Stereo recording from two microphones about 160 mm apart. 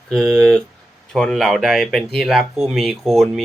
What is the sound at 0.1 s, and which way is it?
Speech, 5° left (ahead or behind).